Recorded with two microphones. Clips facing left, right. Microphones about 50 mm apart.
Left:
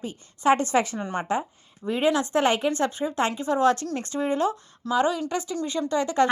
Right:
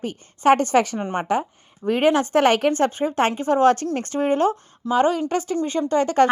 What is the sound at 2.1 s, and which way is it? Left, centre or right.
Speech, right.